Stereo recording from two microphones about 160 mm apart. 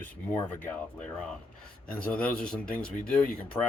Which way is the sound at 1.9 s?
10° left (ahead or behind).